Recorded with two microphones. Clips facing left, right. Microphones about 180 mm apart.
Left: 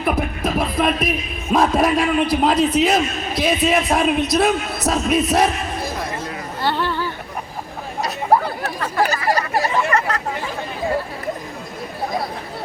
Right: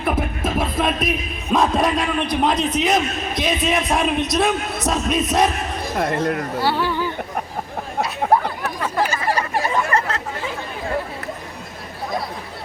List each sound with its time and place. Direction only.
0.0 s music: centre (ahead or behind)
1.5 s a man's voice: 5° left (ahead or behind)
6.0 s speech: 60° right (ahead or behind)
6.6 s speech: 10° right (ahead or behind)
8.2 s chatter: 60° right (ahead or behind)
9.9 s chatter: 25° right (ahead or behind)